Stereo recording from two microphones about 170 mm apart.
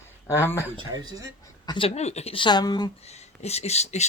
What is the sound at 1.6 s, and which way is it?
Speech, 30° left (ahead or behind).